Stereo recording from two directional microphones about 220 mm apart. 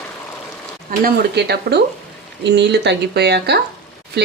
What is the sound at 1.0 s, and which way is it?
Speech, 50° right (ahead or behind).